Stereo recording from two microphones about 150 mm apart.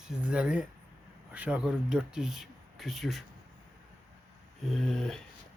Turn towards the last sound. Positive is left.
turn(degrees=5)  # may be behind; listen again after turning